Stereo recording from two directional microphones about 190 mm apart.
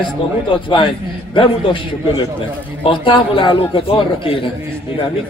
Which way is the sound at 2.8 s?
25° left (ahead or behind).